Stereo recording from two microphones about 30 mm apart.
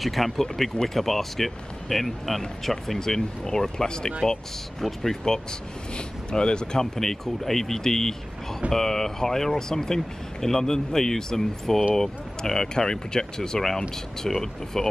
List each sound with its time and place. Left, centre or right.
0.0 s speech: centre
0.6 s speech: centre
5.2 s speech: left
7.0 s speech: centre